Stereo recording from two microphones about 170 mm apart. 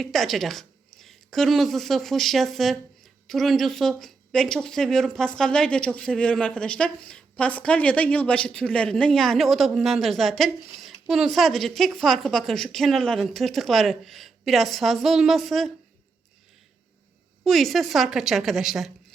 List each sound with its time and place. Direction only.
0.0 s a woman's voice: centre (ahead or behind)
17.4 s speech: centre (ahead or behind)